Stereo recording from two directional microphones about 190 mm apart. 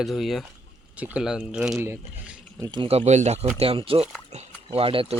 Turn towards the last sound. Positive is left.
turn(degrees=-30)  # may be behind; listen again after turning